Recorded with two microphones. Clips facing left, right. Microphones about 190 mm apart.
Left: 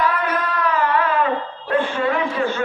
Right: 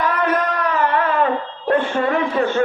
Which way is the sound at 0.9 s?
45° right (ahead or behind).